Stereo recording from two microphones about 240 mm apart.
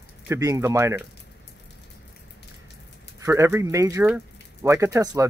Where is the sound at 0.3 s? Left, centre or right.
Centre.